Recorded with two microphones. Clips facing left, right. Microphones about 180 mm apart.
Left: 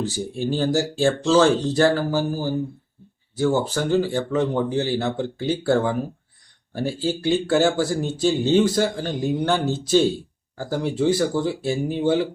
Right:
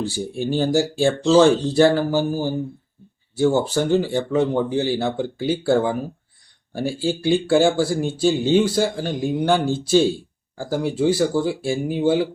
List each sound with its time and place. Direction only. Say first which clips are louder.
0.3 s speech: right 2 dB; 15° right (ahead or behind)